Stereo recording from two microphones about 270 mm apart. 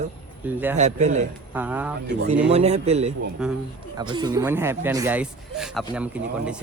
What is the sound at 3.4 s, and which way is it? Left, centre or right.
Speech, centre.